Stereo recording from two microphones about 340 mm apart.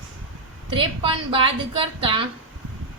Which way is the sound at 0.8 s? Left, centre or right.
Centre.